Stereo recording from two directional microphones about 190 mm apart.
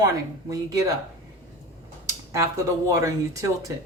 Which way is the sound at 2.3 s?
15° right (ahead or behind).